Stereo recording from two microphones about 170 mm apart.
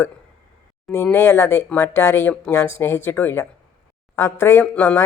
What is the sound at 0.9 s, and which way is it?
Speech, 15° left (ahead or behind).